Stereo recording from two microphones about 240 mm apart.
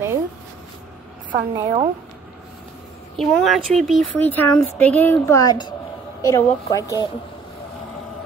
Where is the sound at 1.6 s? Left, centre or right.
Right.